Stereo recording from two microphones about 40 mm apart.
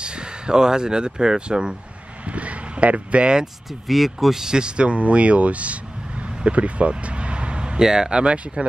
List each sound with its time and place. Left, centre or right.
0.0 s speech: right
2.2 s speech: right
3.8 s speech: centre; by 5.8 s right
6.4 s a sound: right
7.8 s speech: centre